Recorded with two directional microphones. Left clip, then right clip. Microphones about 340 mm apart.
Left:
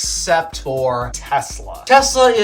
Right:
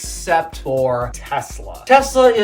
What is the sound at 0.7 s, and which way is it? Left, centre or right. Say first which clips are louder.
Speech: right 5 dB; centre.